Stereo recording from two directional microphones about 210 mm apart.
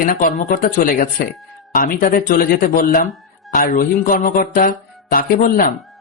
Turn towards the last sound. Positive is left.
turn(degrees=45)  # may be behind; listen again after turning